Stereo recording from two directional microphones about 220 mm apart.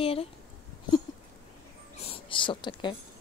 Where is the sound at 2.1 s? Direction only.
25° left (ahead or behind).